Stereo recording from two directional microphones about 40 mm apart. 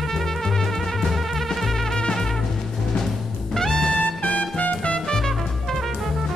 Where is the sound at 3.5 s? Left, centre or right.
Centre.